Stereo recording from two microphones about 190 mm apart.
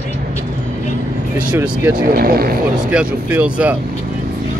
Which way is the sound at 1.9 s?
50° right (ahead or behind).